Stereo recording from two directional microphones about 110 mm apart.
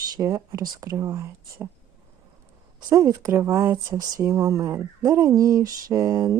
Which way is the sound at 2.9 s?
30° right (ahead or behind).